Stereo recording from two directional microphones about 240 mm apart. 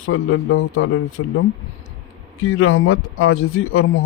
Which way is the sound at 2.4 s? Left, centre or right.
Left.